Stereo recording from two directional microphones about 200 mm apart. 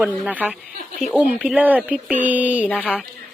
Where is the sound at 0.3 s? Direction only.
10° right (ahead or behind).